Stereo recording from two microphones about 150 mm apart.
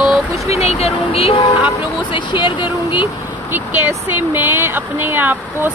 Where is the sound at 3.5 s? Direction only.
15° right (ahead or behind).